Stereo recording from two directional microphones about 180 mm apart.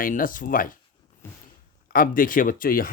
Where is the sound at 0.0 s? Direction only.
50° left (ahead or behind).